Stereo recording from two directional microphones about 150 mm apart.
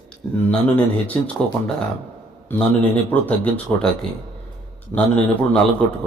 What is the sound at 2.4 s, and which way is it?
Speech, 10° left (ahead or behind).